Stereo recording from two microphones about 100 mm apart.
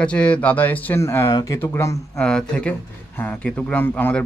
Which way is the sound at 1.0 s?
30° left (ahead or behind).